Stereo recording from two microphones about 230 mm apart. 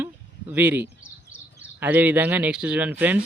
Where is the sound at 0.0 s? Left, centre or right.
Centre.